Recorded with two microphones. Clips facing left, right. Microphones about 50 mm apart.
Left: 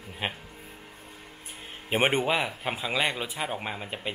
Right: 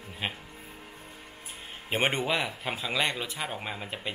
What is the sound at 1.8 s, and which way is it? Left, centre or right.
Speech, centre.